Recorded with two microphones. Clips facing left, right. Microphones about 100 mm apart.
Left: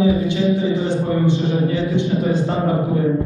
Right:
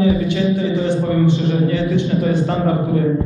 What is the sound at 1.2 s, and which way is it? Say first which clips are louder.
Speech: right 2 dB; 65° right (ahead or behind).